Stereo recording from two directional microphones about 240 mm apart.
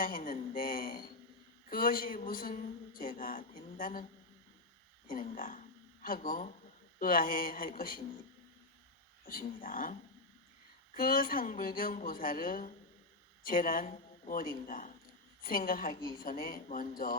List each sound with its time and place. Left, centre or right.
0.0 s speech: left
5.1 s speech: left
9.2 s speech: left
16.0 s a woman's voice: centre
16.2 s speech: left